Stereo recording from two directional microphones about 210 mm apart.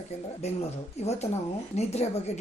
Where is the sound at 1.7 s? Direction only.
30° left (ahead or behind).